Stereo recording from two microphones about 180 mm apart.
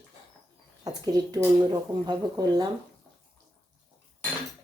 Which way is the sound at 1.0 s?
20° right (ahead or behind).